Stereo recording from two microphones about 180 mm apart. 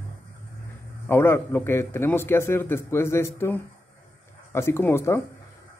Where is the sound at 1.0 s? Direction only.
15° left (ahead or behind).